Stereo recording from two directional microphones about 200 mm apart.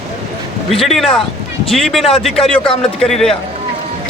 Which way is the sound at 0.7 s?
Centre (ahead or behind).